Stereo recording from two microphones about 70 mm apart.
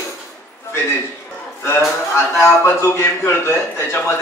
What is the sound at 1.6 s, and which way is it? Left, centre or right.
A man's voice, left.